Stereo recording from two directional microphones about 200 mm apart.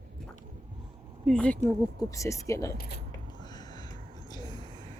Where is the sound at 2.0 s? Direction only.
15° left (ahead or behind).